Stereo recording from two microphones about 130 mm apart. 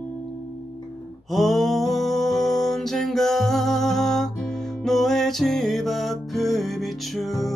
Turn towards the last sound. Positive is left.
turn(degrees=0)  # may be behind; listen again after turning